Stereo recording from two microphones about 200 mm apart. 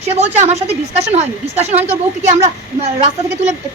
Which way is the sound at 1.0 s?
35° right (ahead or behind).